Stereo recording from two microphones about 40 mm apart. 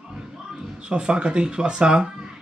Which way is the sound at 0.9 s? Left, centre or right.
Right.